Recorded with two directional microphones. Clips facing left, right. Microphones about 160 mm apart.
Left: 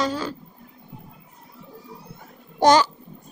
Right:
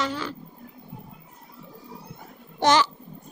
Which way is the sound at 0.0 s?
40° left (ahead or behind).